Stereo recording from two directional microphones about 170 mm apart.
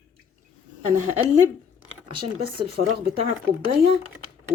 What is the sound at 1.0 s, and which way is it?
Speech, 45° right (ahead or behind).